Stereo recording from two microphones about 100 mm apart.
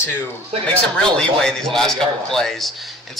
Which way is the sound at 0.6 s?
10° left (ahead or behind).